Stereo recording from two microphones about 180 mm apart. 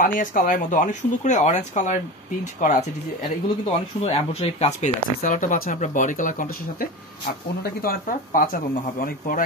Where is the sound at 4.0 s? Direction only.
35° left (ahead or behind).